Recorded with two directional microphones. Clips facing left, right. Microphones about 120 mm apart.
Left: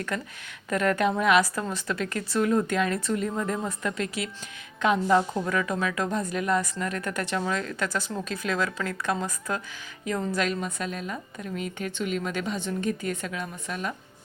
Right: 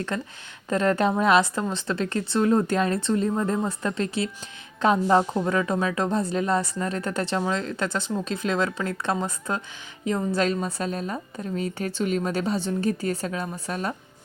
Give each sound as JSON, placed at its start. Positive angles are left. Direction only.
{"t": 0.1, "sound": "a woman's voice", "side_deg": -30}